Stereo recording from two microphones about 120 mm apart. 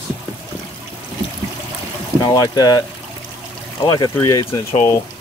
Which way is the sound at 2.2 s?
35° left (ahead or behind).